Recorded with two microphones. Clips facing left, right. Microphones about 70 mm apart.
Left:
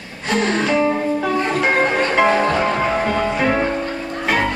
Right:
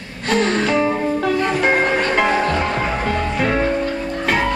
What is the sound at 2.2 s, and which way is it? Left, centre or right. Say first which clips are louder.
Music: left 2 dB; centre.